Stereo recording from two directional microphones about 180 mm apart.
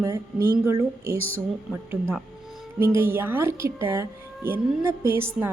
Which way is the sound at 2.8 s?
15° right (ahead or behind).